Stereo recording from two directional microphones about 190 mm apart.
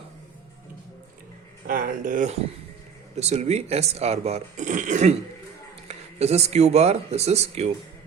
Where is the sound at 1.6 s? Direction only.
45° right (ahead or behind).